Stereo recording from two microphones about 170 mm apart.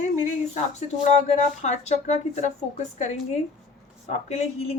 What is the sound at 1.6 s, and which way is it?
A woman's voice, 40° left (ahead or behind).